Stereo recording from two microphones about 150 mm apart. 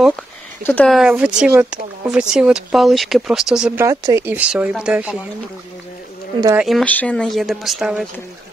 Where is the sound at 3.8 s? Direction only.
20° right (ahead or behind).